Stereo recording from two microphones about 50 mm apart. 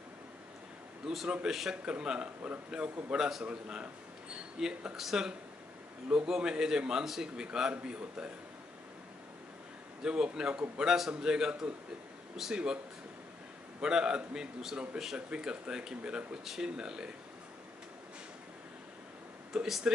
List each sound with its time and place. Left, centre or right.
1.0 s a man's voice: centre
1.9 s a man's voice: centre
10.0 s a man's voice: centre
13.7 s a man's voice: centre
19.5 s speech: centre